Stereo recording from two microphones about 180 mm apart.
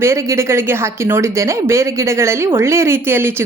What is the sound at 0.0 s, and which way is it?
A woman's voice, 15° right (ahead or behind).